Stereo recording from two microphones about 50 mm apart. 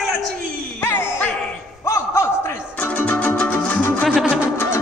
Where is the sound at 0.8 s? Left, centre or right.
Left.